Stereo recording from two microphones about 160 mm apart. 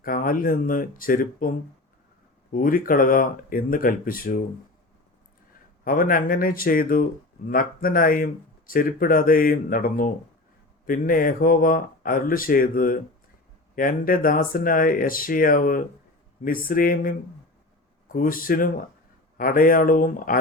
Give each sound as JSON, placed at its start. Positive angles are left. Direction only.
{"t": 0.0, "sound": "speech", "side_deg": 60}
{"t": 5.8, "sound": "speech", "side_deg": 60}